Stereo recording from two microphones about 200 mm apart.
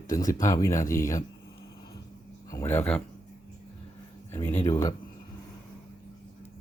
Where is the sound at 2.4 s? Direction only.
15° left (ahead or behind).